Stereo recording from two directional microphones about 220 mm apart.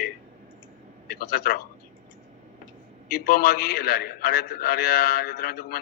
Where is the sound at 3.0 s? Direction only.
45° left (ahead or behind).